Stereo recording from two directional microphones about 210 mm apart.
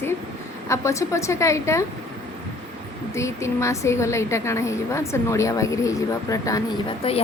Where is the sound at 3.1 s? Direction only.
15° left (ahead or behind).